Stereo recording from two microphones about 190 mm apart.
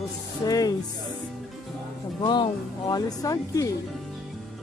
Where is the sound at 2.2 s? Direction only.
25° left (ahead or behind).